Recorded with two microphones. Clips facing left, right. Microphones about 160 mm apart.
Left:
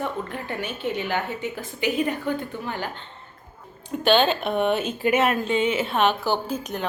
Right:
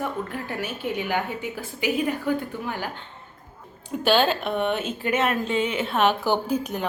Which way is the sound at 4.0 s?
5° right (ahead or behind).